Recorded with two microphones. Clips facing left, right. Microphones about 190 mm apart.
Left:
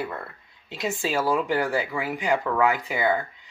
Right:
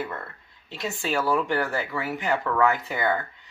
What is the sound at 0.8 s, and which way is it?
Speech, 20° left (ahead or behind).